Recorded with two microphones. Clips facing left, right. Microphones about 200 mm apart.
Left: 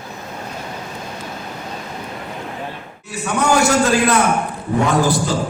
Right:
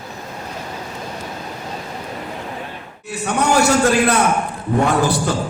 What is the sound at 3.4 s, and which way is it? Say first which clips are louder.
Speech: even; 60° right (ahead or behind).